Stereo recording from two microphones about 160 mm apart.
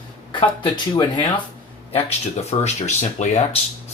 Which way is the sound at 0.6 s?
30° left (ahead or behind).